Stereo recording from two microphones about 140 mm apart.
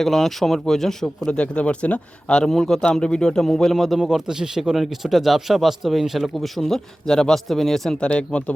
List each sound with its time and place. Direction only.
0.0 s speech: centre (ahead or behind)